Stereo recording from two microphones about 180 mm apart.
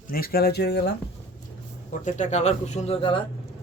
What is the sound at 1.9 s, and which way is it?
A man's voice, 45° left (ahead or behind).